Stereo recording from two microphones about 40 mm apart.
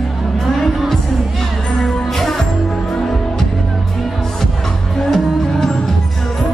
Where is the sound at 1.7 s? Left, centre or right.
Centre.